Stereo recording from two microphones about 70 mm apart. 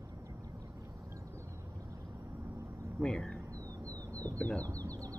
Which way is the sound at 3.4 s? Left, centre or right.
Right.